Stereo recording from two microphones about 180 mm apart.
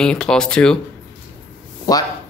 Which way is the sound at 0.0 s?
5° left (ahead or behind).